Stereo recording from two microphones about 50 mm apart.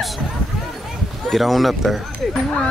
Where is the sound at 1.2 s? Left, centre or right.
Centre.